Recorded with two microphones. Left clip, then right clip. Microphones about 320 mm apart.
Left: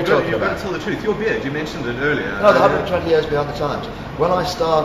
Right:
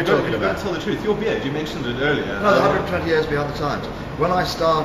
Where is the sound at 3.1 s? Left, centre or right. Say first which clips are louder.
Left 2 dB; centre.